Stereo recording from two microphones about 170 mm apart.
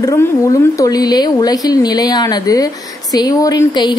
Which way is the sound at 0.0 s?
20° left (ahead or behind).